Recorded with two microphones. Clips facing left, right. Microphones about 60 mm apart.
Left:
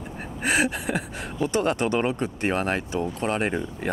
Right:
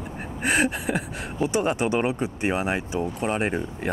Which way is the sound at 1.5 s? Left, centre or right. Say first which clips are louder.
Even; centre.